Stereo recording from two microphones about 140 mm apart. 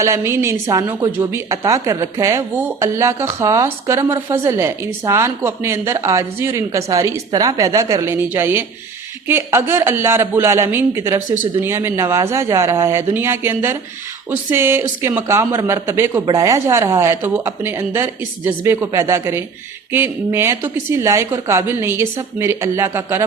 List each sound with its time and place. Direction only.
0.0 s a woman's voice: 20° right (ahead or behind)